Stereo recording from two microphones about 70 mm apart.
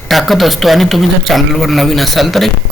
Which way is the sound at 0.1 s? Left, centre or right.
Centre.